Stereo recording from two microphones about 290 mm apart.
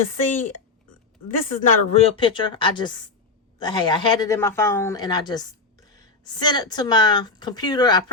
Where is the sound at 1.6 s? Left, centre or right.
Left.